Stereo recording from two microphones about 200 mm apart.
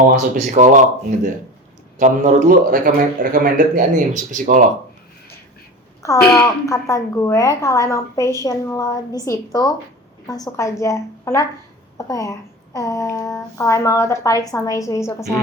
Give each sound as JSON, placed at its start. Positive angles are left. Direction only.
{"t": 0.0, "sound": "speech", "side_deg": -35}
{"t": 6.0, "sound": "speech", "side_deg": 15}